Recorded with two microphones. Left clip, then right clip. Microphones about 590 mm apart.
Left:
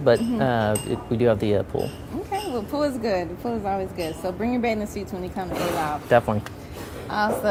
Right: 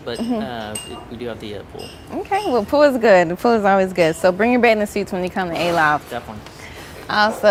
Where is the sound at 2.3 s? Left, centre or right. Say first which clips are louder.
Right 10 dB; right.